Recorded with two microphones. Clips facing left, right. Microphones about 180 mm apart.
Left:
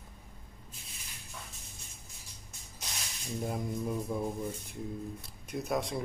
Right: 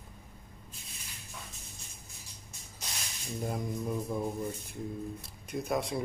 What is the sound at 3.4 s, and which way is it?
Speech, centre (ahead or behind).